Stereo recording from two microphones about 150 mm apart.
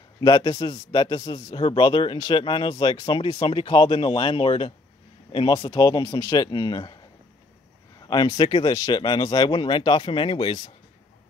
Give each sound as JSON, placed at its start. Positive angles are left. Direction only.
{"t": 0.2, "sound": "a man's voice", "side_deg": 30}
{"t": 8.1, "sound": "a man's voice", "side_deg": 30}